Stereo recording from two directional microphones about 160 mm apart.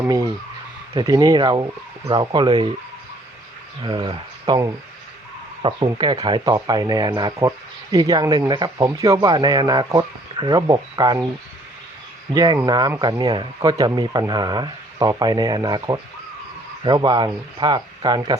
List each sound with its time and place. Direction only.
0.9 s speech: 25° right (ahead or behind)
3.8 s speech: 30° right (ahead or behind)
12.3 s speech: 25° right (ahead or behind)